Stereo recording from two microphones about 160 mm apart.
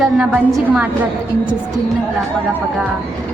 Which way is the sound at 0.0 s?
5° right (ahead or behind).